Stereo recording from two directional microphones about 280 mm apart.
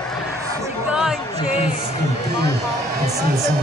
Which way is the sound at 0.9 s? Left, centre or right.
Centre.